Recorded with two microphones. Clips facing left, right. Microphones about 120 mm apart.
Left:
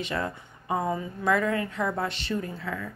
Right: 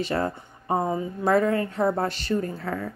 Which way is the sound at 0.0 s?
40° right (ahead or behind).